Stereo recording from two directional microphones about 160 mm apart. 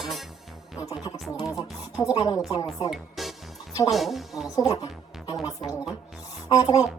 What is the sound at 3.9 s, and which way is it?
Speech, centre (ahead or behind).